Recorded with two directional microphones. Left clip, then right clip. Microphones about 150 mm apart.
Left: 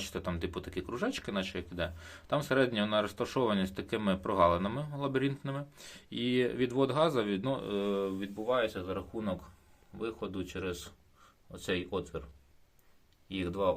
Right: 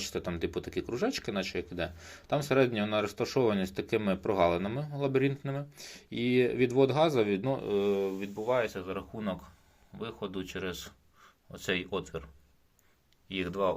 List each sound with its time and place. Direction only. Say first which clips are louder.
0.0 s speech: right 3 dB; 5° right (ahead or behind); by 12.2 s 25° right (ahead or behind)
13.2 s speech: right 1 dB; 20° right (ahead or behind)